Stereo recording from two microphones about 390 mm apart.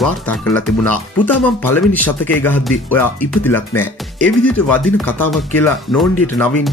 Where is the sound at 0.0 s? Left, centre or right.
Centre.